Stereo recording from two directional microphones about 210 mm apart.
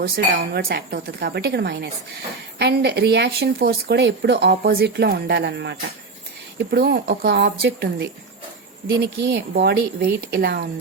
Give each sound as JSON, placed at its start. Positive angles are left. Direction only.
{"t": 0.0, "sound": "a woman's voice", "side_deg": -50}